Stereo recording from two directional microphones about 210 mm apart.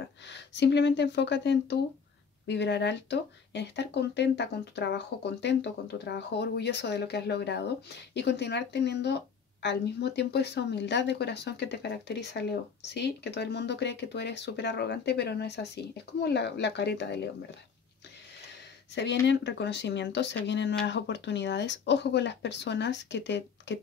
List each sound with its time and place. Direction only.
0.3 s speech: 55° left (ahead or behind)
18.9 s speech: 55° left (ahead or behind)